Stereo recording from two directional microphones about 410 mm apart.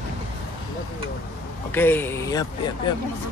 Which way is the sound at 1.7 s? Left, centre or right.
Centre.